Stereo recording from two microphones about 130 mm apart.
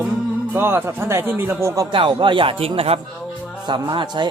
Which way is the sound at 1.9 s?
40° right (ahead or behind).